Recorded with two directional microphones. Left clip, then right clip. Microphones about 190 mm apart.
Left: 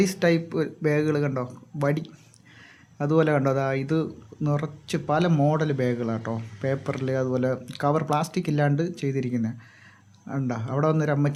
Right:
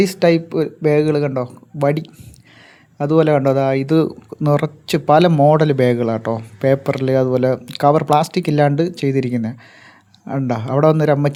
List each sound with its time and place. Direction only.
0.0 s speech: 25° right (ahead or behind)